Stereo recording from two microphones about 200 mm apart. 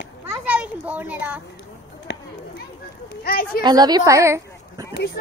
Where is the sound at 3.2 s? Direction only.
50° left (ahead or behind).